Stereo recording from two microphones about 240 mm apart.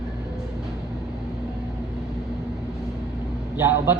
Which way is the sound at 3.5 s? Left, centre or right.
Centre.